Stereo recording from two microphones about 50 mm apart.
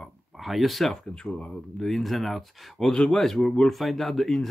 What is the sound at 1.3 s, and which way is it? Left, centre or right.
Speech, left.